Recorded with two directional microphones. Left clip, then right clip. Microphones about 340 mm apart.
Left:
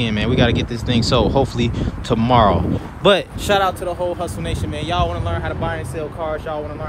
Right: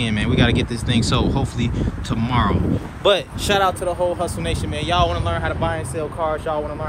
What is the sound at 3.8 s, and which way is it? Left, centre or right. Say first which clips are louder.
Speech: right 1 dB; centre.